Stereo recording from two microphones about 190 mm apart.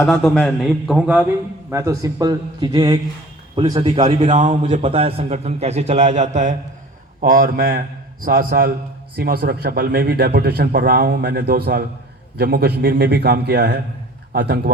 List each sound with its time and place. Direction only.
0.1 s a man's voice: centre (ahead or behind); by 4.8 s 40° right (ahead or behind)
4.8 s a man's voice: 30° right (ahead or behind); by 14.7 s 55° right (ahead or behind)